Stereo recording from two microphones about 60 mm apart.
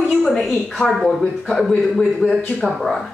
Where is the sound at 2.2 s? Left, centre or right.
Centre.